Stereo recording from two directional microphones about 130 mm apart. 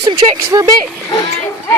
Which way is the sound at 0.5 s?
30° right (ahead or behind).